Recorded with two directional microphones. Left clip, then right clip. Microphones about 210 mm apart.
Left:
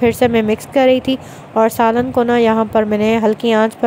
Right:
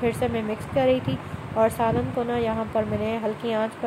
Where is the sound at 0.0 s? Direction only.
45° left (ahead or behind).